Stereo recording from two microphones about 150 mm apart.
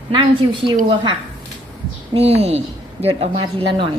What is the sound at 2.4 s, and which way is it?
Speech, 45° right (ahead or behind).